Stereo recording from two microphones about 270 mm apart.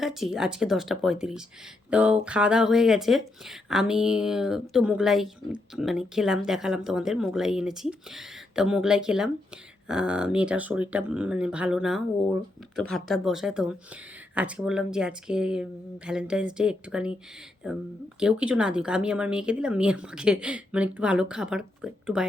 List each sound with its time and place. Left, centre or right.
0.0 s speech: centre